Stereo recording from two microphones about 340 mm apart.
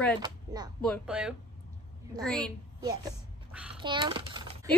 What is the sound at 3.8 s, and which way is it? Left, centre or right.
Typing, centre.